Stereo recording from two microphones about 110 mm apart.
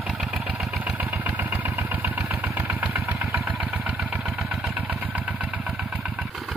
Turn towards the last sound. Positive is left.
turn(degrees=-15)  # may be behind; listen again after turning